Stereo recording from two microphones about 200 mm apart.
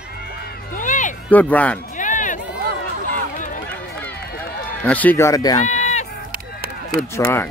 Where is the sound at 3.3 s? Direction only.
40° left (ahead or behind).